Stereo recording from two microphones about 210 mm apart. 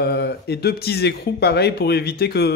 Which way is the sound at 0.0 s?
50° left (ahead or behind).